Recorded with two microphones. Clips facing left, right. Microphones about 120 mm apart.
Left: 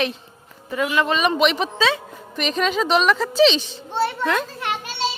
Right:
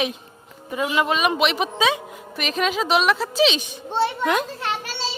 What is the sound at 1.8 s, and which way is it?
Speech, 15° right (ahead or behind).